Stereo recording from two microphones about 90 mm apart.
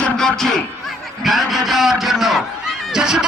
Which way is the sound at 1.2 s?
Centre (ahead or behind).